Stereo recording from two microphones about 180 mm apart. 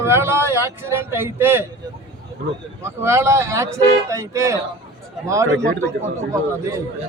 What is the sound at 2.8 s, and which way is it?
Speech, 15° right (ahead or behind).